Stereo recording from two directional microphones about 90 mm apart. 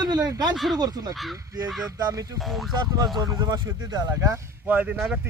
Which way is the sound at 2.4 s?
Centre (ahead or behind).